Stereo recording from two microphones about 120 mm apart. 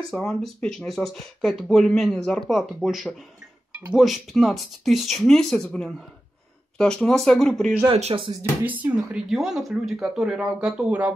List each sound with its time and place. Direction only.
0.1 s speech: centre (ahead or behind)
7.9 s speech: 50° right (ahead or behind)
8.4 s speech: 15° right (ahead or behind)
9.3 s speech: centre (ahead or behind)